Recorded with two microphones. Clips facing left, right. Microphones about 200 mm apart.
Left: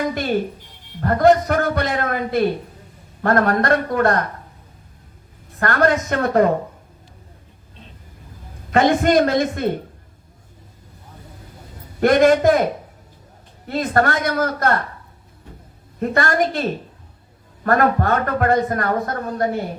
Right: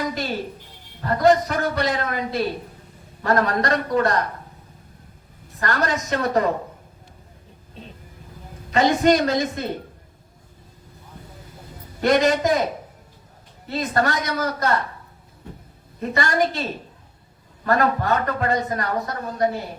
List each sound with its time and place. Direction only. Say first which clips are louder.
1.0 s speech: left 3 dB; 55° left (ahead or behind)
5.5 s speech: left 6 dB; 55° left (ahead or behind)
8.7 s speech: left 2 dB; 55° left (ahead or behind)
11.9 s speech: left 5 dB; 55° left (ahead or behind)
13.7 s a man's voice: left 3 dB; 55° left (ahead or behind)
16.0 s a man's voice: left 3 dB; 55° left (ahead or behind)